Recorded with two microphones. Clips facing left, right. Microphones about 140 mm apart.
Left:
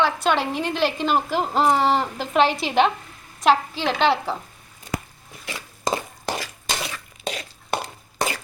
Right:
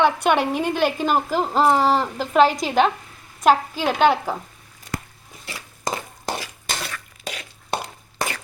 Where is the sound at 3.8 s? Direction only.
45° right (ahead or behind).